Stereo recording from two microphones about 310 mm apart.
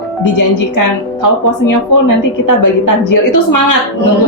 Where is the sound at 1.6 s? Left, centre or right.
Left.